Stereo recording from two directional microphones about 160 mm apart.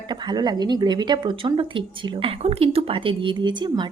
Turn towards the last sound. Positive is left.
turn(degrees=-30)  # may be behind; listen again after turning